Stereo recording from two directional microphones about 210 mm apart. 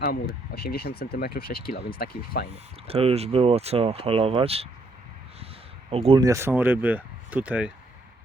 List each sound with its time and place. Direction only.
0.0 s speech: 50° left (ahead or behind)
2.8 s speech: 30° right (ahead or behind)
5.9 s speech: 30° right (ahead or behind)
6.2 s speech: 15° right (ahead or behind)